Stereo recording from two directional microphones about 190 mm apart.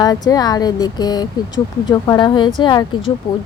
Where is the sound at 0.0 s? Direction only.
20° left (ahead or behind).